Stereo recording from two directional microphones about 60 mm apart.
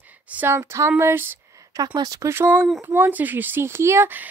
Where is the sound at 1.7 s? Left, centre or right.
Right.